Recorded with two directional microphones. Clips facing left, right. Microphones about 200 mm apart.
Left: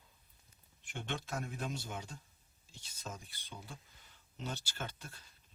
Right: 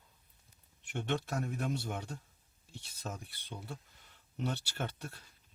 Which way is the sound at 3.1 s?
50° right (ahead or behind).